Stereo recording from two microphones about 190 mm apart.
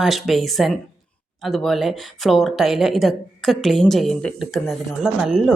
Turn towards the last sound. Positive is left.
turn(degrees=0)  # may be behind; listen again after turning